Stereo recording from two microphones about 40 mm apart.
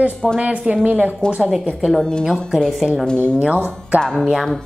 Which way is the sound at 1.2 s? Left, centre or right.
Left.